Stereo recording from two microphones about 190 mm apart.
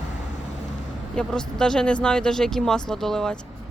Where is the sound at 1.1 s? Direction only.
5° left (ahead or behind).